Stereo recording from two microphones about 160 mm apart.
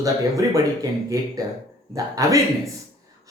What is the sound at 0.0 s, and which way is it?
Speech, 20° right (ahead or behind).